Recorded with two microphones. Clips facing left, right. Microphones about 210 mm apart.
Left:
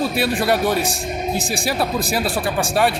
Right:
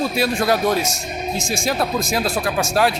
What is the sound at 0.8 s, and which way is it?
Speech, 35° left (ahead or behind).